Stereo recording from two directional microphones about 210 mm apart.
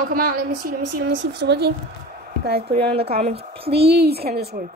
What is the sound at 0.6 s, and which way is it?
Speech, 55° right (ahead or behind).